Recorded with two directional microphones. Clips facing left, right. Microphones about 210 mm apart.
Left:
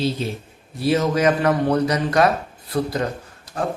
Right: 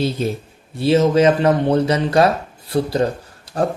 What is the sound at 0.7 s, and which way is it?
A man's voice, 25° right (ahead or behind).